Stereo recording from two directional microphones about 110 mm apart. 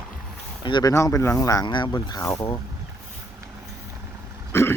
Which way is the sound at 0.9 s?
25° left (ahead or behind).